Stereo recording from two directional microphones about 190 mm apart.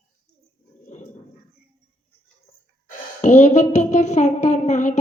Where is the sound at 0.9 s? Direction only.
35° left (ahead or behind).